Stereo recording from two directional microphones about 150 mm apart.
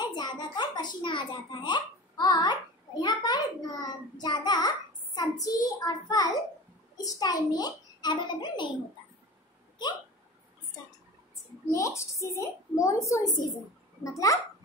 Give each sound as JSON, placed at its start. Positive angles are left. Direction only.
{"t": 0.0, "sound": "a sound", "side_deg": 30}
{"t": 3.0, "sound": "child singing", "side_deg": 25}
{"t": 7.0, "sound": "a child's voice", "side_deg": 25}
{"t": 11.7, "sound": "a woman's voice", "side_deg": 20}